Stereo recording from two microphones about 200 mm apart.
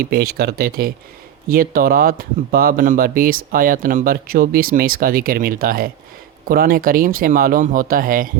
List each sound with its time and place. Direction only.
0.0 s speech: 50° right (ahead or behind)